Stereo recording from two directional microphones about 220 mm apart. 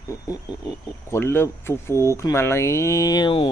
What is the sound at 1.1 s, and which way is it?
Speech, 10° left (ahead or behind).